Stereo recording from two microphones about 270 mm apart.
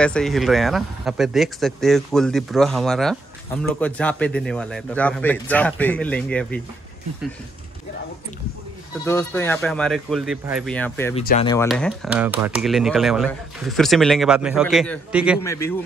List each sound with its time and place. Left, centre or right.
0.0 s speech: centre
9.0 s speech: centre
11.1 s speech: left
11.6 s speech: centre
15.4 s speech: centre